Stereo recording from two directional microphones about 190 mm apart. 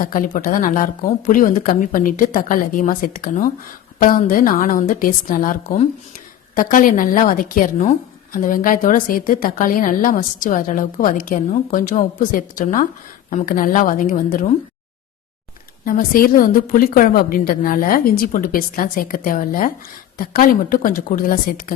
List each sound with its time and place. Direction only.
0.0 s a woman's voice: 45° left (ahead or behind)
15.8 s a woman's voice: 50° left (ahead or behind)